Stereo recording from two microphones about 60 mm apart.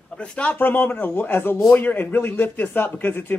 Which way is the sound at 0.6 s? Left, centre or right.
Left.